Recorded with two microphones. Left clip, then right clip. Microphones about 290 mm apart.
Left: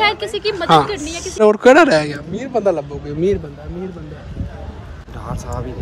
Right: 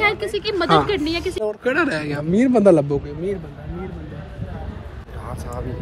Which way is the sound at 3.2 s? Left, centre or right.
Left.